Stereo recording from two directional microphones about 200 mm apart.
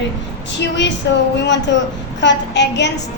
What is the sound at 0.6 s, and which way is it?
A woman's voice, 60° left (ahead or behind).